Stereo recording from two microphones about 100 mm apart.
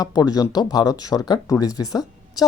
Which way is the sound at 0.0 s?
40° left (ahead or behind).